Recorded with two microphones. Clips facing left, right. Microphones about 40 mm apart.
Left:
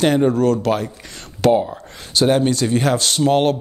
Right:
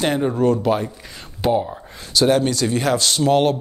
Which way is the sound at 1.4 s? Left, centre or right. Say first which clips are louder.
Left 4 dB; left.